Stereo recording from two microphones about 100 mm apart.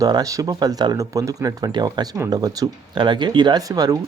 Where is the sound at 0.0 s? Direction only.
35° right (ahead or behind).